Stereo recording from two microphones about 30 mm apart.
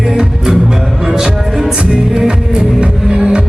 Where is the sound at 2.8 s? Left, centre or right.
Right.